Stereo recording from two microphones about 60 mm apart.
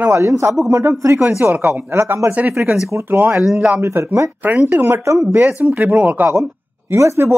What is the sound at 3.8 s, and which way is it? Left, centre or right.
Speech, right.